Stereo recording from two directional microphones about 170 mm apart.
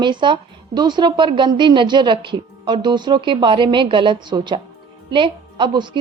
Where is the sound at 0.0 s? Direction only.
25° right (ahead or behind).